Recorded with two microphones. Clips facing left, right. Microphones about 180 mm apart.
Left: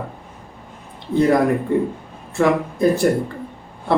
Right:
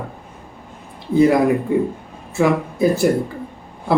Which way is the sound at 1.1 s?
5° right (ahead or behind).